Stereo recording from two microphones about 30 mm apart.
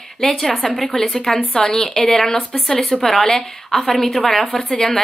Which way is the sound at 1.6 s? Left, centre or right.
Left.